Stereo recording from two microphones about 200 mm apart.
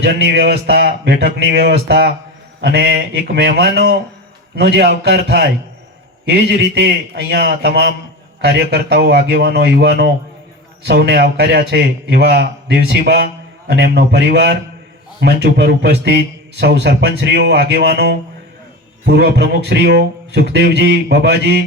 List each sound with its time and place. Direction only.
0.0 s a man's voice: 55° right (ahead or behind)